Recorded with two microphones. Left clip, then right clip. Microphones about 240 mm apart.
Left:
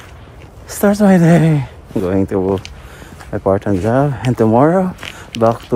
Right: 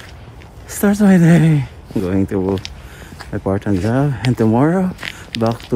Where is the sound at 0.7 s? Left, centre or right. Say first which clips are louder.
Left 3 dB; centre.